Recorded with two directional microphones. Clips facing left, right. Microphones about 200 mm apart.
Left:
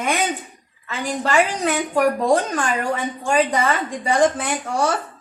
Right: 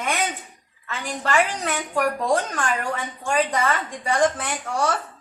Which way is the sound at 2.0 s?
30° left (ahead or behind).